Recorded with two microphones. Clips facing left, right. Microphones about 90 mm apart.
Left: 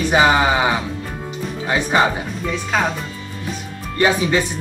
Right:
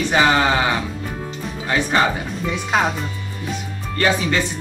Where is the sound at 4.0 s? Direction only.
15° left (ahead or behind).